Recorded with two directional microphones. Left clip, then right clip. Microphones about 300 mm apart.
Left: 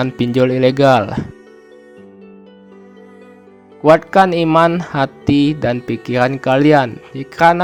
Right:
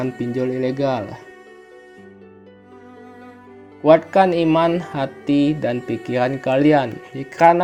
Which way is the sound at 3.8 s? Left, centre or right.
Left.